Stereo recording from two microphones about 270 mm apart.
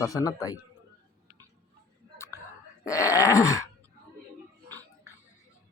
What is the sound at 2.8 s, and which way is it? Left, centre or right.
Groan, centre.